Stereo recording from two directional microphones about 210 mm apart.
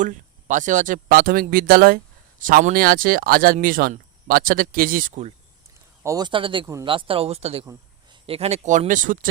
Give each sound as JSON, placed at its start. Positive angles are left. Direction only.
{"t": 0.0, "sound": "speech", "side_deg": -35}
{"t": 6.0, "sound": "speech", "side_deg": -15}
{"t": 7.6, "sound": "a sound", "side_deg": -15}
{"t": 8.3, "sound": "speech", "side_deg": -30}